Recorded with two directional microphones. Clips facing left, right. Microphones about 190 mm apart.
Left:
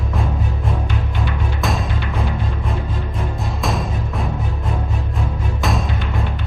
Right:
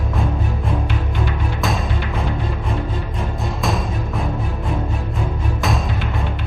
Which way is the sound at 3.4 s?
Centre (ahead or behind).